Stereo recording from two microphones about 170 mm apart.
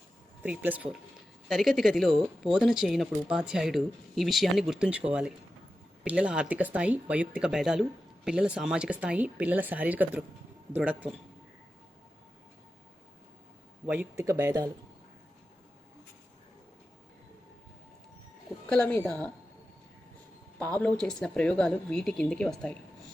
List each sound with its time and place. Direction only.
0.4 s speech: 10° right (ahead or behind)
13.8 s speech: 10° right (ahead or behind)
18.7 s a woman's voice: 5° left (ahead or behind)
20.6 s speech: 10° left (ahead or behind)